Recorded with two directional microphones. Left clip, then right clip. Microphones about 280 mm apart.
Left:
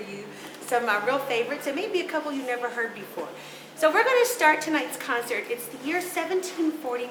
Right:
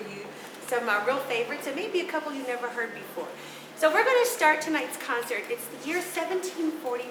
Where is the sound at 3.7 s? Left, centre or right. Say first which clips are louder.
Left 1 dB; centre.